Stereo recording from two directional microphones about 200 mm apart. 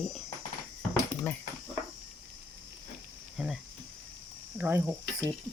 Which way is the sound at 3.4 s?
5° right (ahead or behind).